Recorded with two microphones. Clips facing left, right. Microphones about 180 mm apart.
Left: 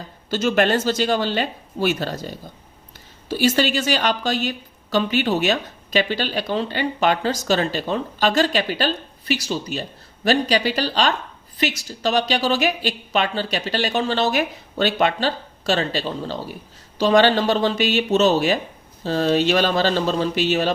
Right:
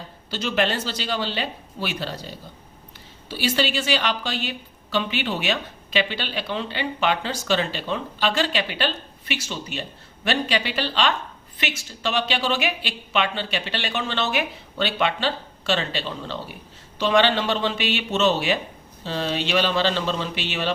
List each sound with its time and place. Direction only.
0.3 s a woman's voice: 50° left (ahead or behind)